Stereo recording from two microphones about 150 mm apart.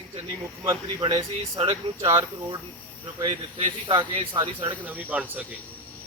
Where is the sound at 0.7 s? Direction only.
25° right (ahead or behind).